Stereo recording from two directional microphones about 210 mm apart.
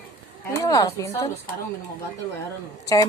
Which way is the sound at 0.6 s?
15° left (ahead or behind).